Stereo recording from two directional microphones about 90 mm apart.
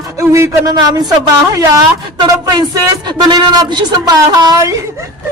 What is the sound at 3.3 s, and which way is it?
A man's voice, 55° right (ahead or behind).